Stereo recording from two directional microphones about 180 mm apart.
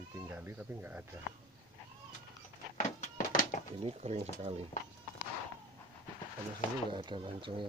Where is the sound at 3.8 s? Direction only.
35° right (ahead or behind).